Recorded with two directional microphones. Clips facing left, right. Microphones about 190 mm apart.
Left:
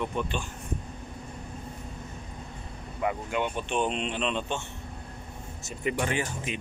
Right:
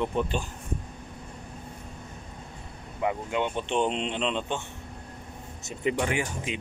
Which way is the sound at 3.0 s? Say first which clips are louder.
Right 1 dB; 20° right (ahead or behind).